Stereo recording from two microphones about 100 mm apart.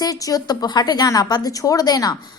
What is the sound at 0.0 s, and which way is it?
A woman's voice, 35° left (ahead or behind).